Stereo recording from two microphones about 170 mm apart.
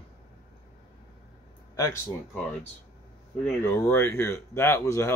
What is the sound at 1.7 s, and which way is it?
Speech, 15° left (ahead or behind).